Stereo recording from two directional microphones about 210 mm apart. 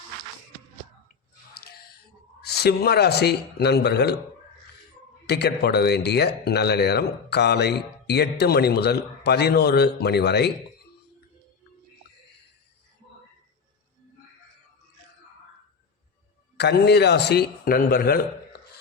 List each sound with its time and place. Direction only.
1.5 s a sound: 45° left (ahead or behind)
2.5 s speech: 50° left (ahead or behind)
5.2 s speech: 50° left (ahead or behind)
16.6 s speech: 50° left (ahead or behind)